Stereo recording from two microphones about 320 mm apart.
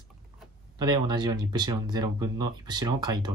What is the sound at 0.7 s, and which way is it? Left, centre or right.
Speech, centre.